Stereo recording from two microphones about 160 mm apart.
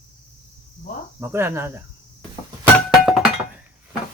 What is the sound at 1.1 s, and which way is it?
Speech, 15° right (ahead or behind).